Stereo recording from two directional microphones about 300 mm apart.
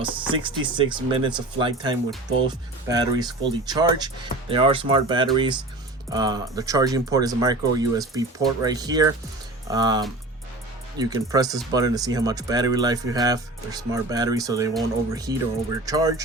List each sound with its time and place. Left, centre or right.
0.0 s speech: centre